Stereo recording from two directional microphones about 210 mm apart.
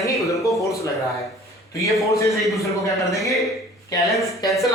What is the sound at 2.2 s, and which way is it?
Speech, 15° left (ahead or behind).